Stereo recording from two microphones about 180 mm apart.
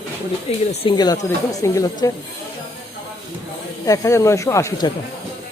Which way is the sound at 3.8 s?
20° left (ahead or behind).